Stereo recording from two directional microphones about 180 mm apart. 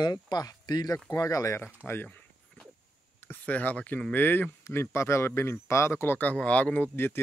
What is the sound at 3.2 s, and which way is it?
Speech, 10° left (ahead or behind).